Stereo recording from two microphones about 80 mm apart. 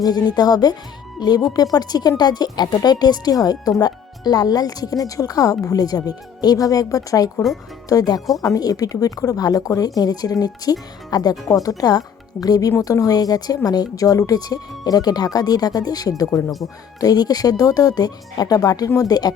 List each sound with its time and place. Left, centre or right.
0.0 s speech: left